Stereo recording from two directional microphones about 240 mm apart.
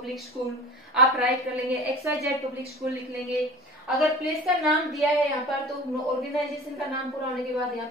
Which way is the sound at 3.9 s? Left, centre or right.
Centre.